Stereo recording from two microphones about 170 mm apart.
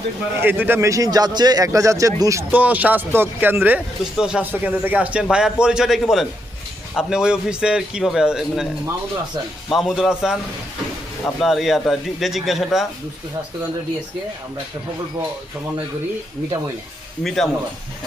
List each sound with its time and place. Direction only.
0.4 s a man's voice: 10° right (ahead or behind)
9.6 s a man's voice: centre (ahead or behind)
11.3 s a man's voice: centre (ahead or behind)
17.2 s a man's voice: centre (ahead or behind)